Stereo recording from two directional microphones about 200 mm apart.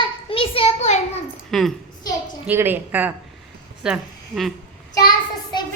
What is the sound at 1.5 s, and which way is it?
Speech, centre (ahead or behind).